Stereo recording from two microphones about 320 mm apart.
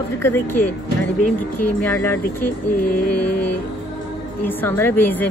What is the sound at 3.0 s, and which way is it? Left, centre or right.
Mantra, left.